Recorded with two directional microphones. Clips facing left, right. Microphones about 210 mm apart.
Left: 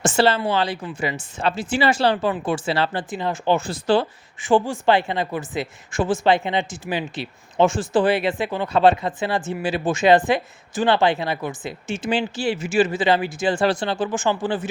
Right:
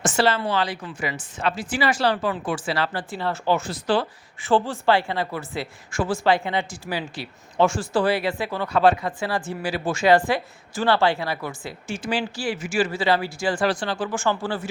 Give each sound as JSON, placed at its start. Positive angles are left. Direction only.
{"t": 0.0, "sound": "speech", "side_deg": 25}
{"t": 4.4, "sound": "speech", "side_deg": 15}